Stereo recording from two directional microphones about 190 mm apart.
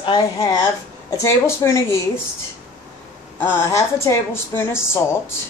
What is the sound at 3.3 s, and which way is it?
A woman's voice, 15° left (ahead or behind).